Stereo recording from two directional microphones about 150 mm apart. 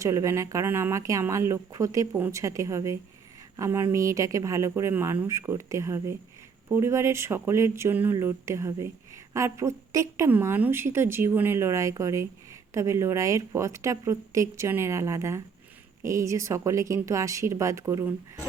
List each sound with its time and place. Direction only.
0.0 s speech: 20° right (ahead or behind)